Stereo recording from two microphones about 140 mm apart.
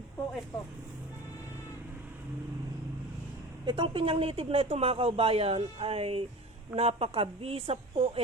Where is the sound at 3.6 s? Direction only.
35° right (ahead or behind).